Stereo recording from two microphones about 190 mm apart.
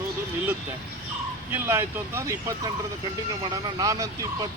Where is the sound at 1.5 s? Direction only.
10° right (ahead or behind).